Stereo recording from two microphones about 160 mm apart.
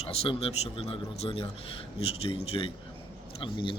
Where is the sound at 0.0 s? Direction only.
40° left (ahead or behind).